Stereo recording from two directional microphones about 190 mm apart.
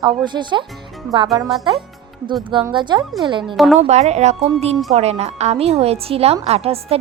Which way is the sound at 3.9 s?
35° right (ahead or behind).